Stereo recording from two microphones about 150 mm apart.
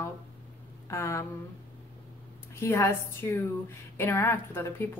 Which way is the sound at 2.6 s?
15° left (ahead or behind).